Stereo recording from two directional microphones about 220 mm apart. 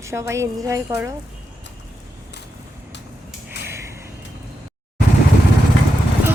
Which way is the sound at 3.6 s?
50° left (ahead or behind).